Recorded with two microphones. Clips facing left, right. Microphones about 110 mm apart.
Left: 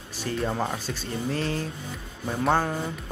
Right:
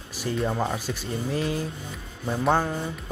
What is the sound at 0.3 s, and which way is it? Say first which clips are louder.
Speech: right 1 dB; 20° right (ahead or behind).